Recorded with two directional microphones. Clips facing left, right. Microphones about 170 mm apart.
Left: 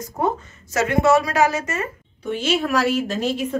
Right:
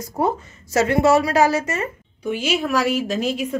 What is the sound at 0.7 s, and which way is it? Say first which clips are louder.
A woman's voice: right 1 dB; 30° right (ahead or behind).